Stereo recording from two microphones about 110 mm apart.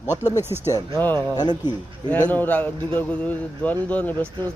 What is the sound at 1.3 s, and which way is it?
Speech, 40° left (ahead or behind).